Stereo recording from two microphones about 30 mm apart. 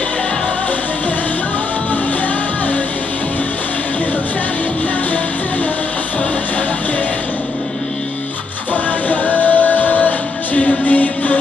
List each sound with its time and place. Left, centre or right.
9.1 s music: left